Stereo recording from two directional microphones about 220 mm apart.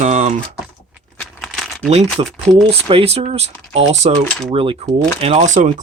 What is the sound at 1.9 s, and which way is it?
Speech, 30° right (ahead or behind).